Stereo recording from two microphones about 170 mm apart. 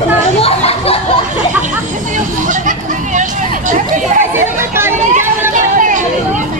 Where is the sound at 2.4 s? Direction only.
50° right (ahead or behind).